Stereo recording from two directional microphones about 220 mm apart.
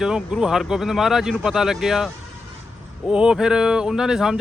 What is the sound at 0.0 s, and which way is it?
Speech, 5° right (ahead or behind).